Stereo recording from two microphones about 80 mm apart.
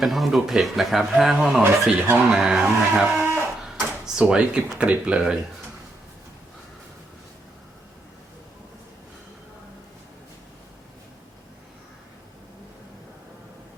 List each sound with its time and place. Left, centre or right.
0.0 s speech: centre
2.3 s music: centre
3.2 s a sound: right
3.8 s speech: centre